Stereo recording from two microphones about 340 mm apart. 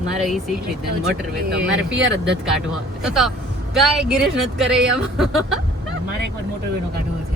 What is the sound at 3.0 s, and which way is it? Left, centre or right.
A woman's voice, centre.